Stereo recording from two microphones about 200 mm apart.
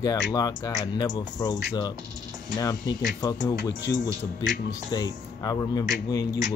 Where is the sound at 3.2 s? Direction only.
20° left (ahead or behind).